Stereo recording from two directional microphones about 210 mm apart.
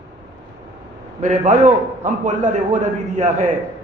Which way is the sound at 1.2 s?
35° right (ahead or behind).